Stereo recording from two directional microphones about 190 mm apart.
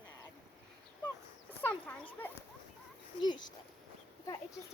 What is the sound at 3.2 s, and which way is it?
Speech, 25° left (ahead or behind).